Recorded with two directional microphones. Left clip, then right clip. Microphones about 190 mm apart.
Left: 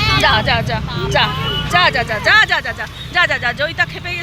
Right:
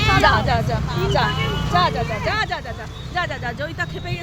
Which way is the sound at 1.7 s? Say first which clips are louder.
Left 6 dB; 5° left (ahead or behind).